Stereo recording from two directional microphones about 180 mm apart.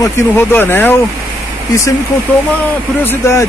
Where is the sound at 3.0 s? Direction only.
15° left (ahead or behind).